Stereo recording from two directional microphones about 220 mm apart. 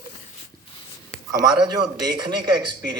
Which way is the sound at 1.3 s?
20° right (ahead or behind).